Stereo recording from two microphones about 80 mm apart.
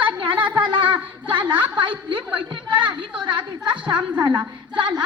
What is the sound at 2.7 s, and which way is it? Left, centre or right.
Speech, right.